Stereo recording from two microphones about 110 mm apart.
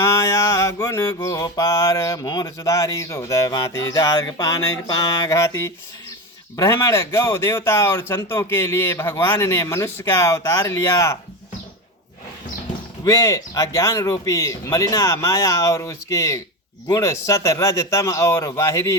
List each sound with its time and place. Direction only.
0.0 s mantra: 25° left (ahead or behind)
6.6 s speech: 30° left (ahead or behind)
13.1 s speech: 30° left (ahead or behind)